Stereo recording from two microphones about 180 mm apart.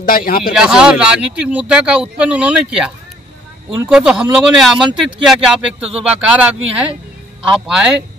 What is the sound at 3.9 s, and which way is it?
Speech, 5° right (ahead or behind).